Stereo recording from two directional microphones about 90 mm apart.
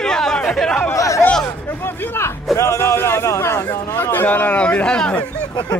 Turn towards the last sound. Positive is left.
turn(degrees=10)  # may be behind; listen again after turning